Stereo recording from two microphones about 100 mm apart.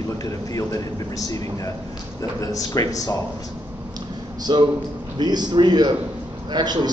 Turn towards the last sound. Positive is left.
turn(degrees=-45)  # may be behind; listen again after turning